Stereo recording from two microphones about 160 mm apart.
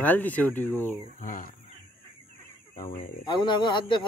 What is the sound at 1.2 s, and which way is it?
Speech, 55° left (ahead or behind).